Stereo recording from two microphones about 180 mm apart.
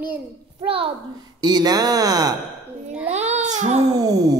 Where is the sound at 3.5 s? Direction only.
40° right (ahead or behind).